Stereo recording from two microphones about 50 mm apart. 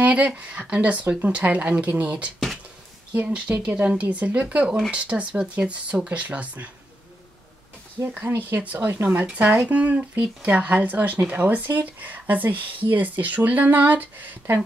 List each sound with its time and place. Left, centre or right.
0.0 s a woman's voice: right
8.0 s speech: right
8.5 s speech: right